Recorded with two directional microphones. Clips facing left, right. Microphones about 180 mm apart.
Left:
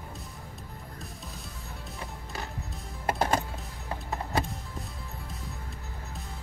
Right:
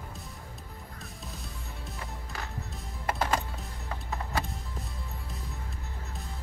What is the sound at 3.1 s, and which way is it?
Music, 40° left (ahead or behind).